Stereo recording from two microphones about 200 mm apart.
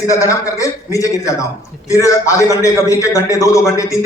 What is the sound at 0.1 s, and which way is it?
A man's voice, 15° left (ahead or behind).